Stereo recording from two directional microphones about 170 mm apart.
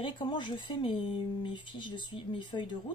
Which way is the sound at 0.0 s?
30° left (ahead or behind).